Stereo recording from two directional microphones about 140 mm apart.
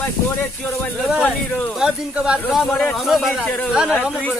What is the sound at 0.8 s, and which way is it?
Speech, 5° left (ahead or behind).